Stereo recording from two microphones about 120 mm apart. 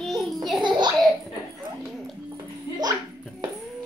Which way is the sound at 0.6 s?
40° right (ahead or behind).